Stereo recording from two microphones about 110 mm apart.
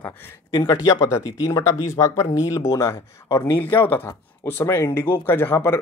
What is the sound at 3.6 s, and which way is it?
Speech, 20° left (ahead or behind).